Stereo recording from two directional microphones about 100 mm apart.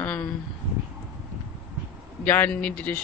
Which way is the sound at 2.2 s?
15° left (ahead or behind).